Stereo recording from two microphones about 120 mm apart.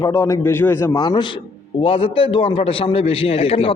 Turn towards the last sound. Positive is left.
turn(degrees=55)  # may be behind; listen again after turning